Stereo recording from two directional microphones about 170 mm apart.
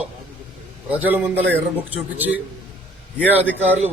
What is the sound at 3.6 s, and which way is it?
Speech, 10° right (ahead or behind).